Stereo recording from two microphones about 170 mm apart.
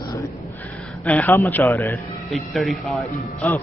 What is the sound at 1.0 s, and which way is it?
A man's voice, 10° left (ahead or behind).